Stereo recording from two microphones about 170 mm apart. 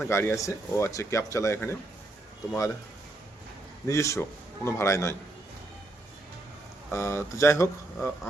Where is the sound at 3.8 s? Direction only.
15° left (ahead or behind).